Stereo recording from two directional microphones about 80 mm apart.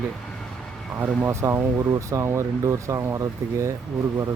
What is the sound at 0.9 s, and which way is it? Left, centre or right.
Speech, right.